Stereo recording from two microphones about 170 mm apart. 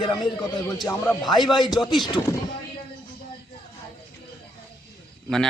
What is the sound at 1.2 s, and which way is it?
Speech, 25° left (ahead or behind).